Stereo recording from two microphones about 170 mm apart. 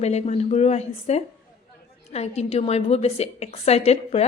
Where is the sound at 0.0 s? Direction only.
40° left (ahead or behind).